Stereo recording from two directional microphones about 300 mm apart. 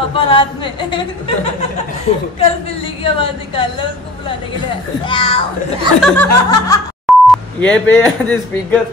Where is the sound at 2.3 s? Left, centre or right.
Centre.